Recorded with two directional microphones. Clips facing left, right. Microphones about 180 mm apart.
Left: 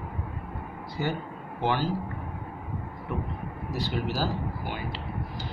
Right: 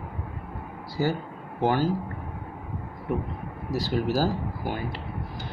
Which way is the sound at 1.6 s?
45° right (ahead or behind).